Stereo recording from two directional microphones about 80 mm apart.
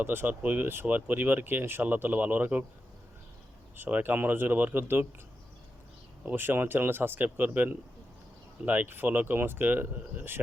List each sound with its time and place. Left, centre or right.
0.0 s speech: right
3.8 s speech: right
6.2 s speech: right